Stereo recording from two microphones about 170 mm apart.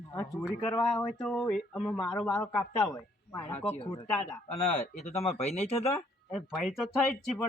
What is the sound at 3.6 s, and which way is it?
Speech, 35° left (ahead or behind).